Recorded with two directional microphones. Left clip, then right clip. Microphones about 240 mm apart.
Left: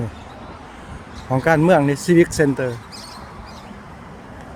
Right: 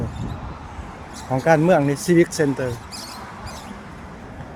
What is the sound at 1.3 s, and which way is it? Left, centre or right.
Speech, centre.